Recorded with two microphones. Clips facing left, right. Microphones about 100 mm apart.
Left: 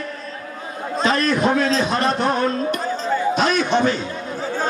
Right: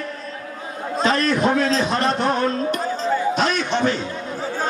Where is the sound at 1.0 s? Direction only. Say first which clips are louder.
Even; 35° right (ahead or behind).